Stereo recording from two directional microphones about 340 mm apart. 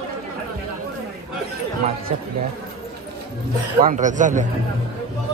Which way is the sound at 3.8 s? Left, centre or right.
Right.